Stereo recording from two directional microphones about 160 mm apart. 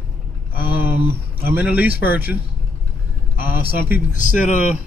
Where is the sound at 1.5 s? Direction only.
10° right (ahead or behind).